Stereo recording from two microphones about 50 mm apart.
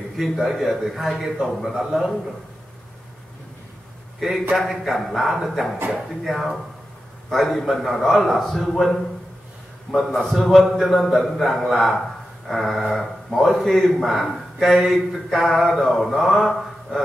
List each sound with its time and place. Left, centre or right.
0.2 s a man's voice: centre
4.5 s a man's voice: centre
9.9 s a man's voice: centre
10.2 s a man's voice: centre